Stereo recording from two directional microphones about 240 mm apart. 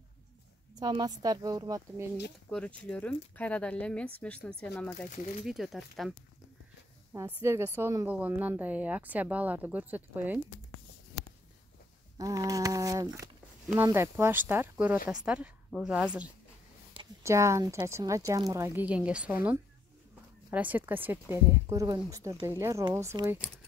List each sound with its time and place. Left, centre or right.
0.7 s a woman's voice: centre
2.5 s speech: centre
7.2 s a woman's voice: centre
12.2 s a woman's voice: centre
16.9 s a woman's voice: centre